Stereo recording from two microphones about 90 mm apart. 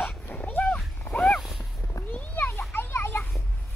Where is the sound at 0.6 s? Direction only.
Centre (ahead or behind).